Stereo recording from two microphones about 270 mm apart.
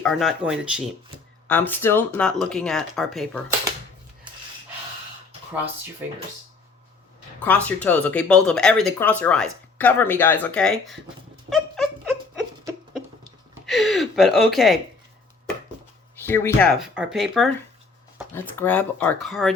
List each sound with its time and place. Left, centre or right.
0.0 s speech: centre
7.4 s speech: centre
11.4 s dog: centre
13.7 s a sound: centre
16.1 s speech: centre